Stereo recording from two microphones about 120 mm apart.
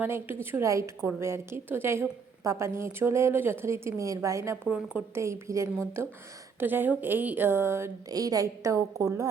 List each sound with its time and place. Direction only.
0.0 s a woman's voice: 15° right (ahead or behind)